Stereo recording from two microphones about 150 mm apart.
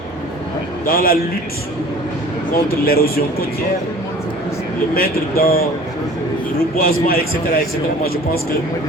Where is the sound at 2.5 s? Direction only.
85° left.